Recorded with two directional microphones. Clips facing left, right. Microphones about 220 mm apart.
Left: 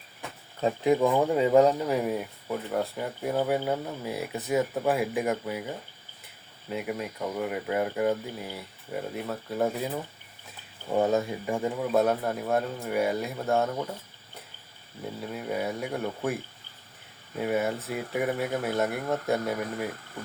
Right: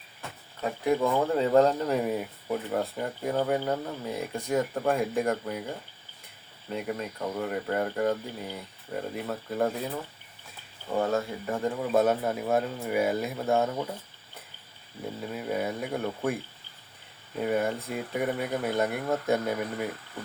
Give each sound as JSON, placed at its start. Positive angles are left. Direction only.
{"t": 0.6, "sound": "speech", "side_deg": 20}
{"t": 10.9, "sound": "speech", "side_deg": 20}
{"t": 11.8, "sound": "speech", "side_deg": 0}
{"t": 15.2, "sound": "speech", "side_deg": 0}
{"t": 17.4, "sound": "speech", "side_deg": 5}